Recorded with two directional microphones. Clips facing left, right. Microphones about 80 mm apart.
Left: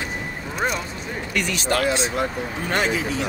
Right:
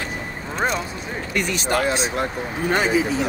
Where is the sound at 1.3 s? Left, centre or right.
Right.